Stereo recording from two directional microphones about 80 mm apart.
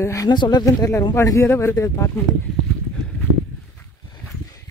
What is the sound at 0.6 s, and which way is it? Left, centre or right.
Speech, left.